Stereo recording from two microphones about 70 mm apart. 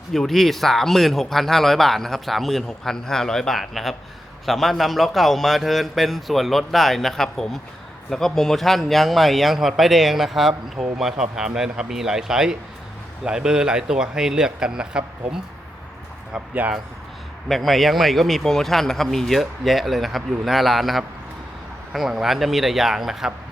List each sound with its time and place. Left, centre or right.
0.1 s a man's voice: centre
16.3 s speech: right
17.5 s a man's voice: centre